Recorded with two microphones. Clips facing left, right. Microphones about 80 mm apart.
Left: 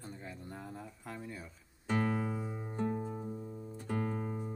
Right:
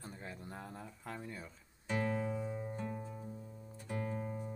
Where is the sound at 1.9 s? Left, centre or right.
Left.